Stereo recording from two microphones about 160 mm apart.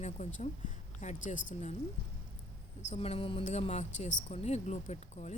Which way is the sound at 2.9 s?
40° left (ahead or behind).